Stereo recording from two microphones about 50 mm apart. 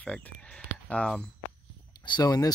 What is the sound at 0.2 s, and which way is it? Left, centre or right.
Speech, left.